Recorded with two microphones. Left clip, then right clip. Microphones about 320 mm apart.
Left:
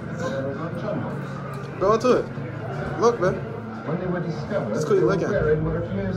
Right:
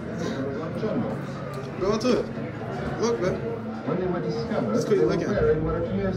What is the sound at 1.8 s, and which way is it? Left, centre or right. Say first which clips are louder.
A woman's voice: left 5 dB; centre.